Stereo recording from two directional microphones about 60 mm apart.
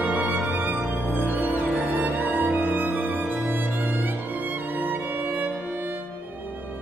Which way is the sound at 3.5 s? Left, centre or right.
Right.